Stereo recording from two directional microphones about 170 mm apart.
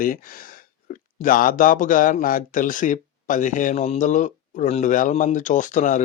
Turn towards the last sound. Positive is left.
turn(degrees=50)  # may be behind; listen again after turning